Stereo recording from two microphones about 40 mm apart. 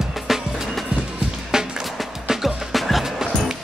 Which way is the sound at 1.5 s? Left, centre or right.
Centre.